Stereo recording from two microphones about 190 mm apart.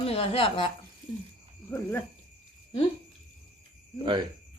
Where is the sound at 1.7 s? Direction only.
10° left (ahead or behind).